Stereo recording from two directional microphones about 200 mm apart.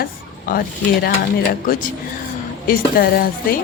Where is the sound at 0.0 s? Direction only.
45° left (ahead or behind).